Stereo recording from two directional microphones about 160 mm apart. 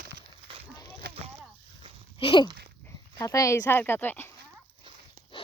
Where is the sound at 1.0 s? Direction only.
70° right (ahead or behind).